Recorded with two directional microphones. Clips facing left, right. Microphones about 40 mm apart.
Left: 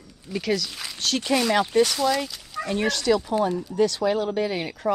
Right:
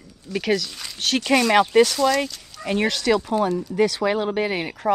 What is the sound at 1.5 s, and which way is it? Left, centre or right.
Speech, right.